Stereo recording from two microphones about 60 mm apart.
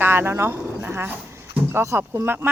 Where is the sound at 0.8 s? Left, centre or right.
Right.